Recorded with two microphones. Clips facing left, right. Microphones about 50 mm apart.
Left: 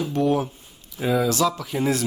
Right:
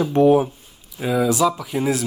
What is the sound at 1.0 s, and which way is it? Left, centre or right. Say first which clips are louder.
Speech: right 2 dB; centre.